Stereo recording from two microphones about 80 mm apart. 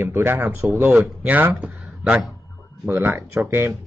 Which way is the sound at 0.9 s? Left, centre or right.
Centre.